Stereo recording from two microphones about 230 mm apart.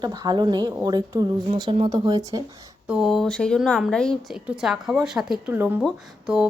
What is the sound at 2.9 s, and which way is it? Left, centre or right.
Speech, centre.